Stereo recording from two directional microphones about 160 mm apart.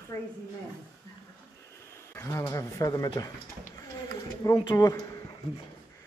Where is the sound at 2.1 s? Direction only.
15° left (ahead or behind).